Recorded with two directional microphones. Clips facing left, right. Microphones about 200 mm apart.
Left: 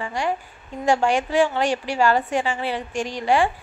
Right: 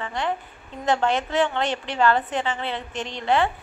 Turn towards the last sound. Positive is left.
turn(degrees=10)  # may be behind; listen again after turning